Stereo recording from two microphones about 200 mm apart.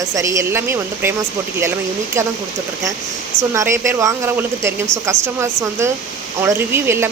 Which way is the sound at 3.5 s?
15° right (ahead or behind).